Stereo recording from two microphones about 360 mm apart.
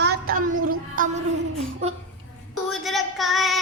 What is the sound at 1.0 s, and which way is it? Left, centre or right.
Music, right.